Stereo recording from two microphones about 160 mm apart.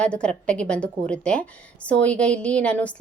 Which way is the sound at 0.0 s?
5° left (ahead or behind).